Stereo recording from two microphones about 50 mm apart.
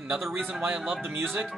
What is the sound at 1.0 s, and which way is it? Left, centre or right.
Speech, right.